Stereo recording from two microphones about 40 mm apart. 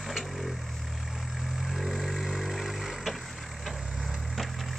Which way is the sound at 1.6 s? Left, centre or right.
Centre.